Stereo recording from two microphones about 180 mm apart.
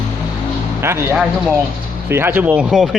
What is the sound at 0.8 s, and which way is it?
Speech, 10° right (ahead or behind).